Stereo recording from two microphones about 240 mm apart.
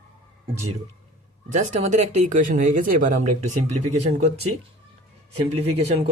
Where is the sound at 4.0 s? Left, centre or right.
Right.